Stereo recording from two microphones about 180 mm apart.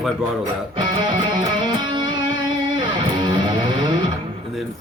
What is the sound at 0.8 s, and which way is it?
Music, 25° right (ahead or behind).